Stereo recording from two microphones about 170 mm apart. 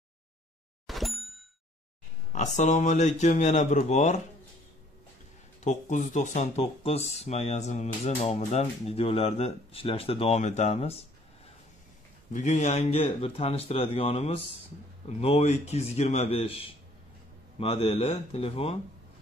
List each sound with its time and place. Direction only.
0.8 s plop: centre (ahead or behind)
2.3 s speech: 45° left (ahead or behind)
5.6 s speech: 45° left (ahead or behind)
12.3 s speech: 45° left (ahead or behind)